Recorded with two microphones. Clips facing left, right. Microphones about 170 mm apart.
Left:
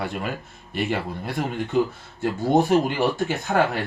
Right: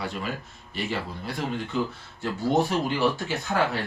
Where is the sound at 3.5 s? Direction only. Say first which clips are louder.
Left 4 dB; 65° left (ahead or behind).